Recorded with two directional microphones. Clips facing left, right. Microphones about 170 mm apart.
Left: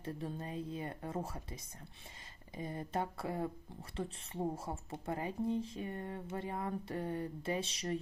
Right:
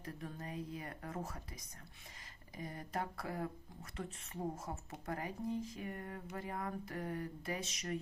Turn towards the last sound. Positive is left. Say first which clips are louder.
# left 4 dB
turn(degrees=30)  # may be behind; listen again after turning